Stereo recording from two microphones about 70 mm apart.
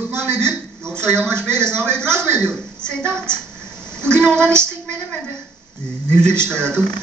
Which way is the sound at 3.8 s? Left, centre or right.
Centre.